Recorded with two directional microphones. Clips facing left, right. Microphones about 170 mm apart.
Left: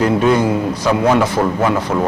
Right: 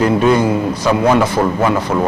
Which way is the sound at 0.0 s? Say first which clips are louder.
Right 1 dB; 20° right (ahead or behind).